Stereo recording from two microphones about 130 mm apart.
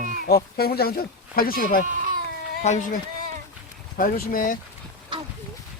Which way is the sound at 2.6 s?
70° left (ahead or behind).